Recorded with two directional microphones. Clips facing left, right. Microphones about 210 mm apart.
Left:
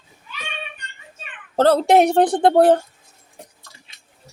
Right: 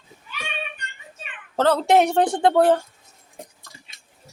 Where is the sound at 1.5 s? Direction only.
35° left (ahead or behind).